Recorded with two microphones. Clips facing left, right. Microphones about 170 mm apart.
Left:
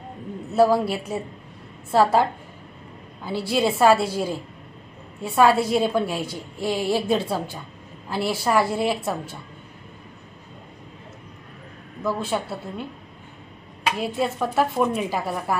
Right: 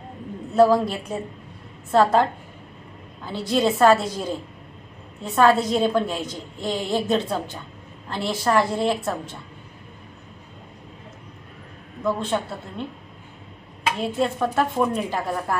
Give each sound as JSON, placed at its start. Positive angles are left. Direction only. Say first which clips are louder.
{"t": 0.6, "sound": "a woman's voice", "louder": "right 1 dB", "side_deg": 10}
{"t": 3.3, "sound": "a woman's voice", "louder": "right 1 dB", "side_deg": 10}
{"t": 12.0, "sound": "a woman's voice", "louder": "right 1 dB", "side_deg": 5}
{"t": 14.0, "sound": "a woman's voice", "louder": "right 3 dB", "side_deg": 5}